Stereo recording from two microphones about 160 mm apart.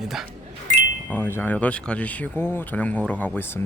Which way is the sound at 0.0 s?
Centre (ahead or behind).